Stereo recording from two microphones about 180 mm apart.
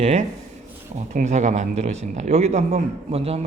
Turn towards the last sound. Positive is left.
turn(degrees=-35)  # may be behind; listen again after turning